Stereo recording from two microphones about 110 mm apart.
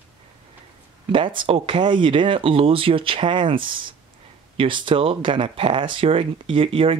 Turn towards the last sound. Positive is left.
turn(degrees=-60)  # may be behind; listen again after turning